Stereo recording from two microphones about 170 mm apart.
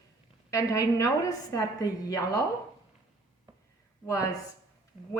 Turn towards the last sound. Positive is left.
turn(degrees=20)  # may be behind; listen again after turning